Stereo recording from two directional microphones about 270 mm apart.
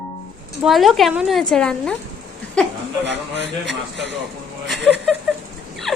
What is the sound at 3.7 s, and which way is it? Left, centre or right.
Speech, right.